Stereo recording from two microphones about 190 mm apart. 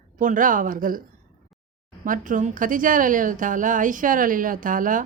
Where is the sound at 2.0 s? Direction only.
45° right (ahead or behind).